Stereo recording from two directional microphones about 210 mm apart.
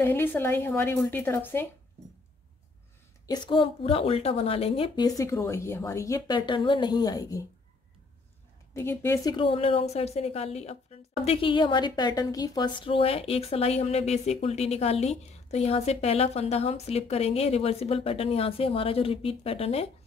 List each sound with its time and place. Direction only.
0.0 s speech: 10° left (ahead or behind)
3.3 s a woman's voice: 25° left (ahead or behind)
8.7 s a woman's voice: 10° left (ahead or behind); by 19.9 s 30° left (ahead or behind)